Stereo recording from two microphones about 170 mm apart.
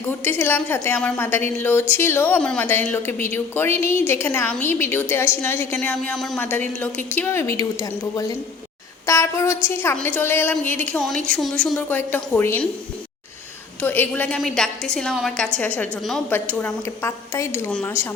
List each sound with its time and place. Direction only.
0.1 s a woman's voice: 10° left (ahead or behind)
13.8 s a woman's voice: 10° left (ahead or behind)
17.7 s a woman's voice: 5° left (ahead or behind)